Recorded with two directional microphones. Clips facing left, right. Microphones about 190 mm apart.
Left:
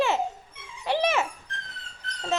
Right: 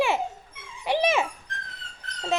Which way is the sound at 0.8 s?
15° right (ahead or behind).